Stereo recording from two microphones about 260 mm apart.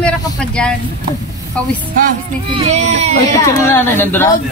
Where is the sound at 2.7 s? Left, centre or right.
Right.